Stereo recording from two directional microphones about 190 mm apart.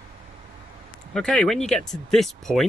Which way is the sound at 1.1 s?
5° left (ahead or behind).